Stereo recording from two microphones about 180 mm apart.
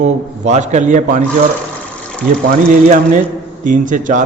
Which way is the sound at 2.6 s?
40° right (ahead or behind).